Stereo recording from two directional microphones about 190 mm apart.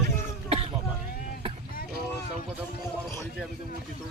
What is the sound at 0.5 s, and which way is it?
Speech, 30° right (ahead or behind).